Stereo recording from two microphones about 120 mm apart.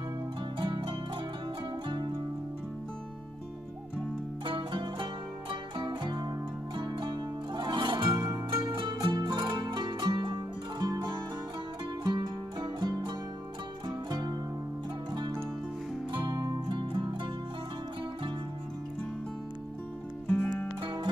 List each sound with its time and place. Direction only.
0.6 s zither: 45° right (ahead or behind)
4.5 s music: 45° right (ahead or behind)
16.1 s music: 35° right (ahead or behind)
20.2 s music: 15° left (ahead or behind)
20.8 s music: 40° right (ahead or behind)